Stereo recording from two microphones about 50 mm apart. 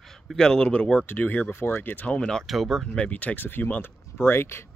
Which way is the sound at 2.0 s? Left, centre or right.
Left.